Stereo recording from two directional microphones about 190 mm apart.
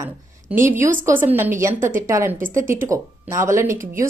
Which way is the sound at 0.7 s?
45° right (ahead or behind).